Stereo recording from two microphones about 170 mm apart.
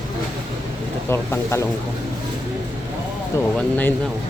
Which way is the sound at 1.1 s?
15° left (ahead or behind).